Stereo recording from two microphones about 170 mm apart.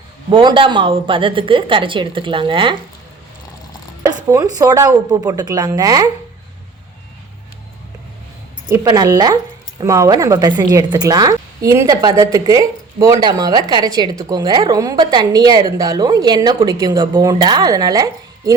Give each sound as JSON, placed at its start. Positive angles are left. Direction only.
{"t": 0.3, "sound": "speech", "side_deg": -30}
{"t": 4.0, "sound": "speech", "side_deg": -20}
{"t": 8.7, "sound": "speech", "side_deg": -20}